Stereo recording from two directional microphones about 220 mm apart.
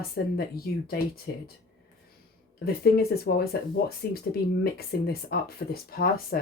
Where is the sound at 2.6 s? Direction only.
45° left (ahead or behind).